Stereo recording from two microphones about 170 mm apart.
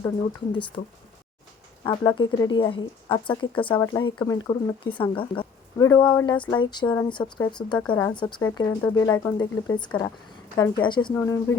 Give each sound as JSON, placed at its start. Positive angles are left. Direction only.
{"t": 1.8, "sound": "speech", "side_deg": 25}
{"t": 5.7, "sound": "speech", "side_deg": 20}
{"t": 8.4, "sound": "speech", "side_deg": 15}